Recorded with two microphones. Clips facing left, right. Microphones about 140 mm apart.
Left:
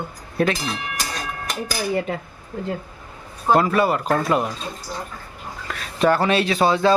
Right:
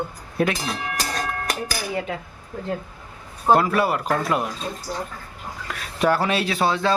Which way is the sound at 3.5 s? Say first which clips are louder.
Left 1 dB; 5° right (ahead or behind).